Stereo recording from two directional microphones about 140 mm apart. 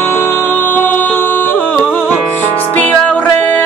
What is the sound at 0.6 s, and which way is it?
Music, 15° left (ahead or behind).